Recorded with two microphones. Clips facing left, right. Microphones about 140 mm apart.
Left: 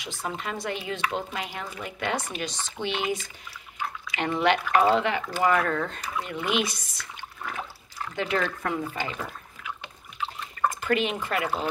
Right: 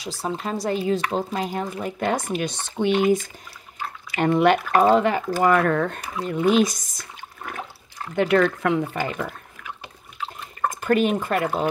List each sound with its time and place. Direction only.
0.0 s speech: 35° right (ahead or behind)
2.4 s speech: 55° right (ahead or behind)
5.7 s speech: 55° right (ahead or behind)
6.2 s speech: 40° right (ahead or behind)
8.2 s speech: 60° right (ahead or behind)
8.9 s speech: 55° right (ahead or behind)
10.7 s speech: 45° right (ahead or behind)